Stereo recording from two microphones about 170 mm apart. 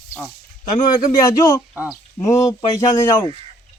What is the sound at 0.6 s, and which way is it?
Speech, 25° left (ahead or behind).